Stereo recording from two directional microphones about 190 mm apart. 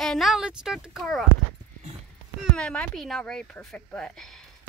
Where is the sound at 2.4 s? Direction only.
5° left (ahead or behind).